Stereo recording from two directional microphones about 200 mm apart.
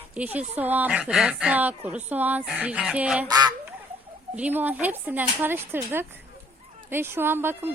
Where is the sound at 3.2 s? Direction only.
20° right (ahead or behind).